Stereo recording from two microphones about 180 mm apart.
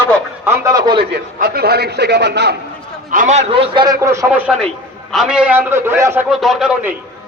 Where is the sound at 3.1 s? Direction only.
45° right (ahead or behind).